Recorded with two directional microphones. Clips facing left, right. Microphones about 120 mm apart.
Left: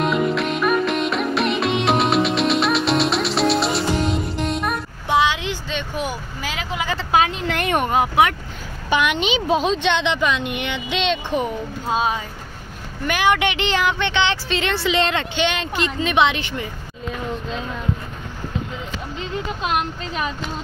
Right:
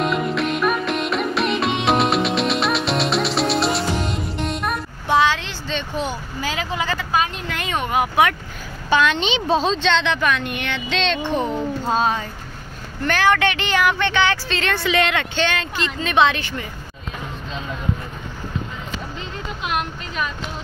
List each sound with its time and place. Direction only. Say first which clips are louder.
0.0 s music: left 1 dB; centre (ahead or behind)
5.0 s vehicle: right 1 dB; 15° left (ahead or behind)
7.1 s a sound: left 8 dB; 75° left (ahead or behind); by 7.9 s 60° left (ahead or behind)
7.9 s speech: right 1 dB; 25° left (ahead or behind)
8.9 s speech: right 1 dB; 15° left (ahead or behind)